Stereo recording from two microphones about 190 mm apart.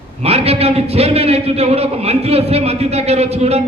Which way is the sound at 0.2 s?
35° right (ahead or behind).